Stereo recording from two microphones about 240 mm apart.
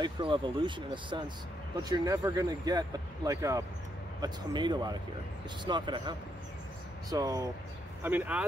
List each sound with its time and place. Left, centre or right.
0.0 s speech: centre